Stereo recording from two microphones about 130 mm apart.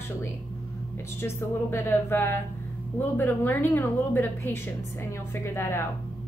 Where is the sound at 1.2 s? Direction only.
20° left (ahead or behind).